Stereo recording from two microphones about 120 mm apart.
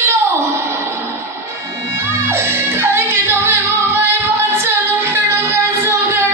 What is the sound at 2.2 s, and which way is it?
Music, 20° right (ahead or behind).